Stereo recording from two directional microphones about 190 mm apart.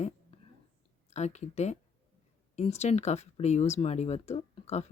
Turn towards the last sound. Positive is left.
turn(degrees=30)  # may be behind; listen again after turning